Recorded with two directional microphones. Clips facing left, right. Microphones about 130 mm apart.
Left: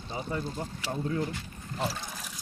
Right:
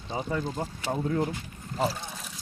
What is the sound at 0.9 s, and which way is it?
Speech, 55° right (ahead or behind).